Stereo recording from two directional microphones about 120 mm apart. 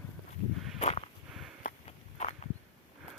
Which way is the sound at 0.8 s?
60° left (ahead or behind).